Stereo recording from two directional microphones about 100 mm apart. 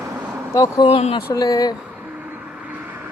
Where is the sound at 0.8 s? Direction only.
75° left (ahead or behind).